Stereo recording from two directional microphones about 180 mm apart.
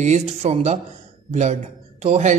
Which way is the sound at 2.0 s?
40° right (ahead or behind).